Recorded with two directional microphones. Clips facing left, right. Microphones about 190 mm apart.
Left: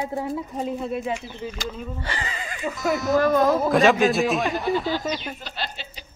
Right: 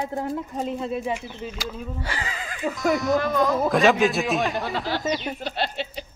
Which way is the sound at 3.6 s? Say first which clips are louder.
Left 1 dB; centre (ahead or behind).